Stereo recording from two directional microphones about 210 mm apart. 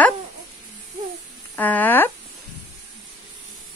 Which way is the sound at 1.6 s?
10° left (ahead or behind).